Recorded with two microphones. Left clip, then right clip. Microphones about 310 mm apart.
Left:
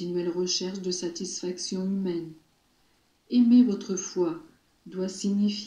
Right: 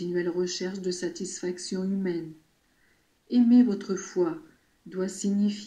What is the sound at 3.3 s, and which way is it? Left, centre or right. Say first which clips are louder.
Speech: even; right.